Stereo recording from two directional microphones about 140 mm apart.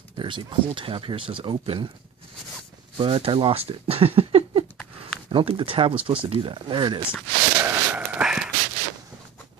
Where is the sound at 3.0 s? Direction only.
40° right (ahead or behind).